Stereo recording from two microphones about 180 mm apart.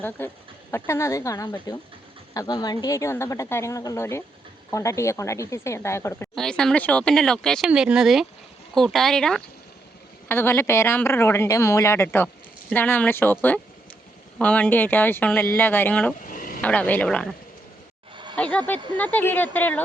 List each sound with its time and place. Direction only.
0.2 s speech: 10° left (ahead or behind)
6.3 s speech: 5° left (ahead or behind)
16.2 s a sound: 50° left (ahead or behind)
16.6 s speech: 10° left (ahead or behind)
18.3 s speech: 5° left (ahead or behind)